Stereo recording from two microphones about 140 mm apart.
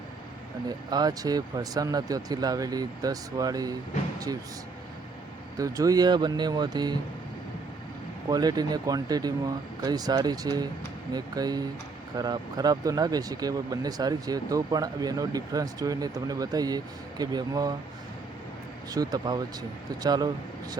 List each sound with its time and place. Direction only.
0.7 s speech: 30° right (ahead or behind)
5.5 s speech: 25° right (ahead or behind)
8.3 s speech: 30° right (ahead or behind)
18.9 s speech: 25° right (ahead or behind)